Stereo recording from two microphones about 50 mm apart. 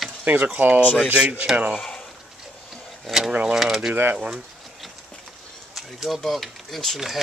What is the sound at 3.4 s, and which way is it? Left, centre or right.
Speech, centre.